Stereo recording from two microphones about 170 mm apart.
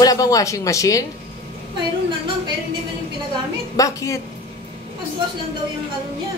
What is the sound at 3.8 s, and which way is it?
Speech, 20° left (ahead or behind).